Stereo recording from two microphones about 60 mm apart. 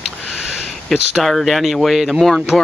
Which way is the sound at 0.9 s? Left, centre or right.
Centre.